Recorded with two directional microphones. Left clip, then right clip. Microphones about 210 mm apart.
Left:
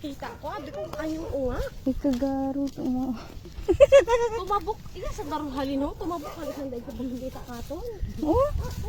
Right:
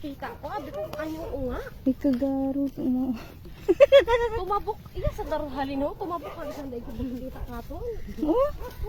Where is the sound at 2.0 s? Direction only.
20° right (ahead or behind); by 7.1 s centre (ahead or behind).